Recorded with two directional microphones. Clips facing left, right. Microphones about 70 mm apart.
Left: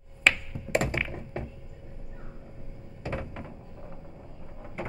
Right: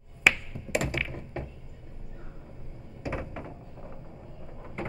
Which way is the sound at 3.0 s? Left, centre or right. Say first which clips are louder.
Right 1 dB; centre.